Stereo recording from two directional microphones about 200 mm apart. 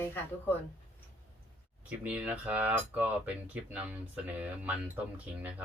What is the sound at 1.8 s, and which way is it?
Speech, 5° right (ahead or behind).